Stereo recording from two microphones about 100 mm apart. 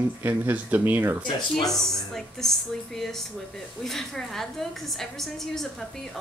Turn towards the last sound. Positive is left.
turn(degrees=5)  # may be behind; listen again after turning